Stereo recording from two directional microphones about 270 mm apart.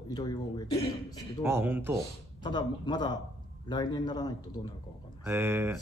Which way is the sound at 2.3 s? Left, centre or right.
Centre.